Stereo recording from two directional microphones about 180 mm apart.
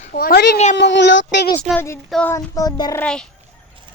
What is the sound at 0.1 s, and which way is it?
Speech, 55° left (ahead or behind).